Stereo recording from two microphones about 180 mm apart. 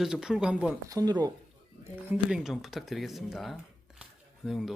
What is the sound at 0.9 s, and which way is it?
Speech, 20° right (ahead or behind).